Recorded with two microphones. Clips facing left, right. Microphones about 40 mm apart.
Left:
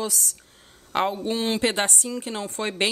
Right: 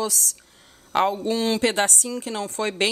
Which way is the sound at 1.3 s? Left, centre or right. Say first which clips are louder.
Right 2 dB; left.